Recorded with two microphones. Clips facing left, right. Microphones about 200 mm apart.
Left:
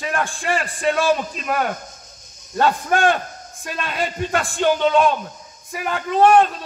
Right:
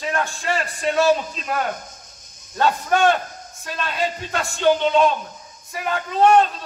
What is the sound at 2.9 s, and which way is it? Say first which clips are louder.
Speech: right 2 dB; 50° left (ahead or behind).